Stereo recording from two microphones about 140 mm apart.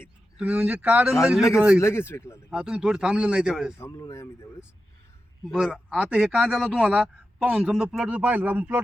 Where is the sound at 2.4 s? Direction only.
5° right (ahead or behind).